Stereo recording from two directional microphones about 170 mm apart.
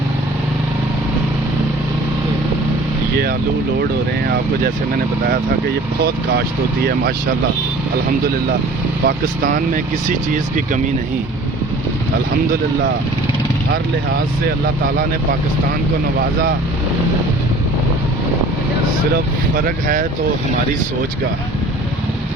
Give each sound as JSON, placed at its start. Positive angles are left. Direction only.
{"t": 9.0, "sound": "speech", "side_deg": -55}
{"t": 19.5, "sound": "speech", "side_deg": -55}